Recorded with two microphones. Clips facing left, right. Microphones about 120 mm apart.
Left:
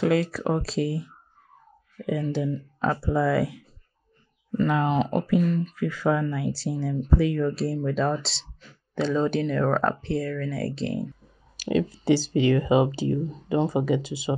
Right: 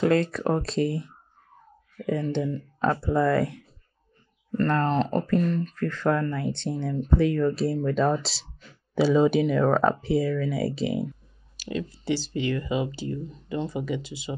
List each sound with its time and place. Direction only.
0.0 s speech: 5° left (ahead or behind)
11.7 s speech: 90° left